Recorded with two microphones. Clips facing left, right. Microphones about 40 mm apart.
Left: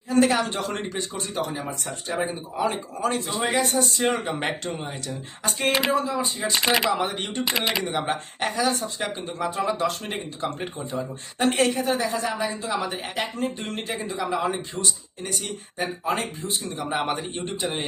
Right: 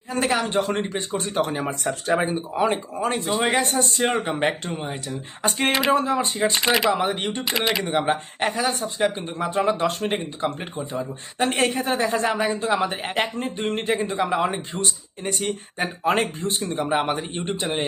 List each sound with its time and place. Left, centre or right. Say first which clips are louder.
0.1 s a sound: left 3 dB; right
0.4 s speech: right 5 dB; right
1.5 s speech: right 5 dB; right
2.3 s speech: right 4 dB; right
4.1 s speech: right 3 dB; right
5.0 s speech: right 4 dB; right
6.5 s speech: left 1 dB; centre
7.0 s speech: right 3 dB; centre
7.4 s speech: right 1 dB; centre
7.9 s speech: right 4 dB; right
9.2 s speech: right 3 dB; right
11.5 s speech: right 1 dB; right
16.4 s speech: right 4 dB; right
16.8 s speech: right 3 dB; centre